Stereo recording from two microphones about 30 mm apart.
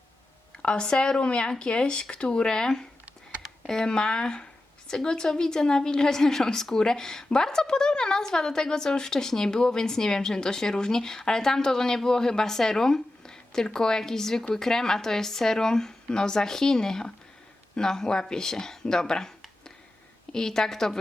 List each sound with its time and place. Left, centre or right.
0.6 s speech: left
3.8 s a woman's voice: left
20.3 s a woman's voice: centre